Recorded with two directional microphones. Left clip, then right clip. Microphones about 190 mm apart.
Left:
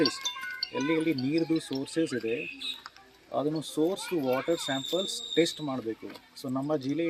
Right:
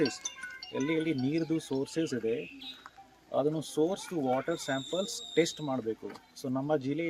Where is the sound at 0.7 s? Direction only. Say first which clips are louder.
Left 2 dB; 20° right (ahead or behind).